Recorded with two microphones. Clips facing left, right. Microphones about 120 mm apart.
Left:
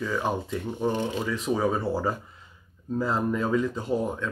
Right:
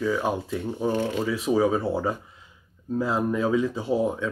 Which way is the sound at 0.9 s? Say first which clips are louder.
Right 3 dB; 20° left (ahead or behind).